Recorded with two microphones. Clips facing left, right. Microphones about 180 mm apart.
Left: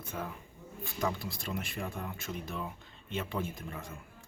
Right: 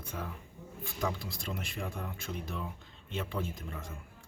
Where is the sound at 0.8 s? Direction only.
Centre (ahead or behind).